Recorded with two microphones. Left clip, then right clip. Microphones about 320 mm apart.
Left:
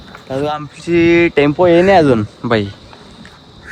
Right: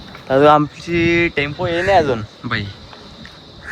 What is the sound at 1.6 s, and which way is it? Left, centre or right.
Speech, left.